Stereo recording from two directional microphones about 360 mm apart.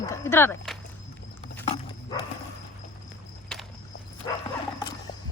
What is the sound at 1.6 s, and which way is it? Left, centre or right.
Dog, centre.